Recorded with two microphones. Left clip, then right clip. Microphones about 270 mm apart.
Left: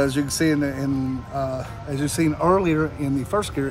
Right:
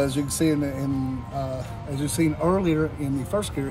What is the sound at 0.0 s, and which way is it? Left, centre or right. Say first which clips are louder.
Speech: left 2 dB; left.